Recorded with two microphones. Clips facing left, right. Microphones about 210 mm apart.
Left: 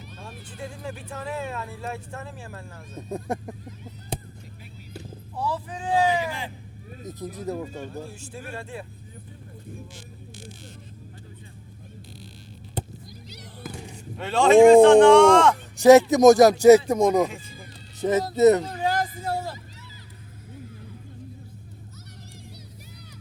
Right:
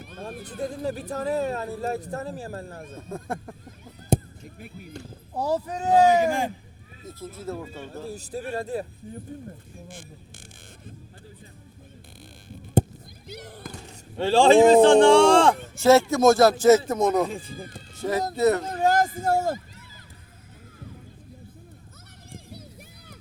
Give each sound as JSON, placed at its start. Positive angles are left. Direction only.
{"t": 0.1, "sound": "vehicle", "side_deg": -55}
{"t": 0.4, "sound": "speech", "side_deg": -40}
{"t": 3.1, "sound": "speech", "side_deg": 20}
{"t": 4.1, "sound": "a sound", "side_deg": -45}
{"t": 5.3, "sound": "speech", "side_deg": -40}
{"t": 7.1, "sound": "speech", "side_deg": 15}
{"t": 8.0, "sound": "speech", "side_deg": -40}
{"t": 12.8, "sound": "a sound", "side_deg": -45}
{"t": 13.2, "sound": "music", "side_deg": -55}
{"t": 14.2, "sound": "speech", "side_deg": -30}
{"t": 15.8, "sound": "speech", "side_deg": 15}
{"t": 17.3, "sound": "speech", "side_deg": -35}
{"t": 18.0, "sound": "speech", "side_deg": 20}
{"t": 18.6, "sound": "speech", "side_deg": -45}